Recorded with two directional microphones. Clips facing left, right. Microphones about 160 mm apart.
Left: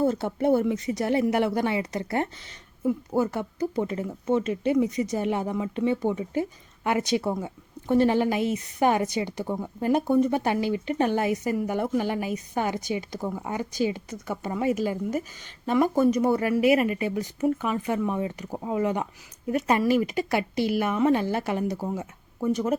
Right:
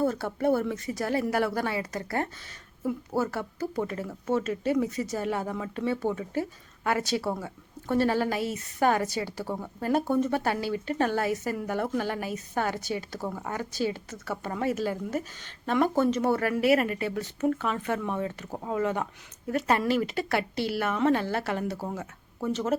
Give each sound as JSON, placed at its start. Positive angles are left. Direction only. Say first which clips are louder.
{"t": 0.0, "sound": "speech", "louder": "left 2 dB", "side_deg": 20}